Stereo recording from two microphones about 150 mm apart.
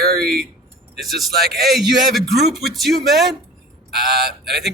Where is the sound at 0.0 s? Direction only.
90° right.